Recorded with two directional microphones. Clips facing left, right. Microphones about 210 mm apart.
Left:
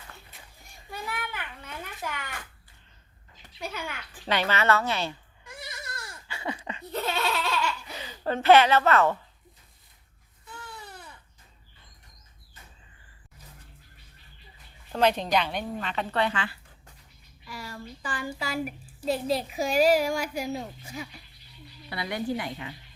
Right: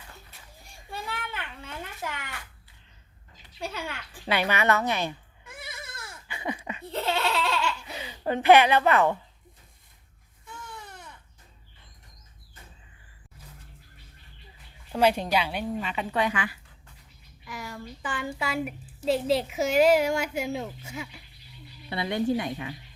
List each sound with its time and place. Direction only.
0.6 s a sound: 30° right (ahead or behind)
3.6 s speech: 30° right (ahead or behind)
4.3 s speech: 15° right (ahead or behind)
6.2 s a sound: 15° right (ahead or behind)
6.9 s baby laughter: 25° right (ahead or behind)
10.8 s baby cry: 5° left (ahead or behind)
14.9 s speech: 10° right (ahead or behind)
18.0 s a child's voice: 25° right (ahead or behind)